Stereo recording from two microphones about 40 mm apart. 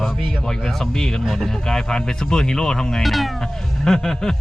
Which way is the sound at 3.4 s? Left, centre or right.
Centre.